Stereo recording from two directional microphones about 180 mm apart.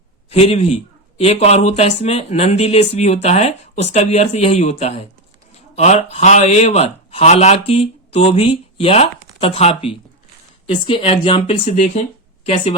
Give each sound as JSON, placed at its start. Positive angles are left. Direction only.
{"t": 0.3, "sound": "a man's voice", "side_deg": 35}